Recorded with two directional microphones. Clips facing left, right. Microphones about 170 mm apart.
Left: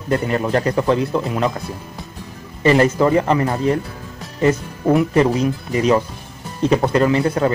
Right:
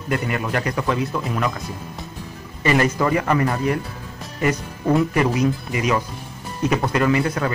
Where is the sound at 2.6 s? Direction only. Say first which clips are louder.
Left 5 dB; 30° left (ahead or behind).